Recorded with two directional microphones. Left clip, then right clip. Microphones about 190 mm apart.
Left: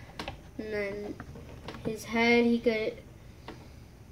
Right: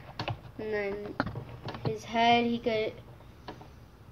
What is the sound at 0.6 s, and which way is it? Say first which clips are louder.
Speech: right 1 dB; 25° left (ahead or behind).